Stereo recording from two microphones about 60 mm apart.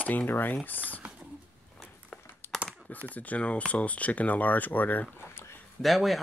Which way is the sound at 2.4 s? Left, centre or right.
Left.